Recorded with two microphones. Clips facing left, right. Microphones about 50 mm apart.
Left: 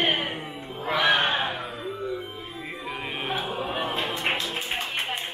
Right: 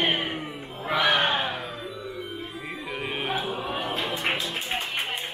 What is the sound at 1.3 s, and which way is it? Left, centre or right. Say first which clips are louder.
Music: even; left.